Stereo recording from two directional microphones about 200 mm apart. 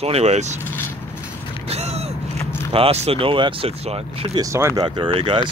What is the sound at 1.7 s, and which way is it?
Creak, 30° right (ahead or behind).